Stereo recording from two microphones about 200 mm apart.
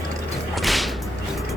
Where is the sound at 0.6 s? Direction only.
Centre (ahead or behind).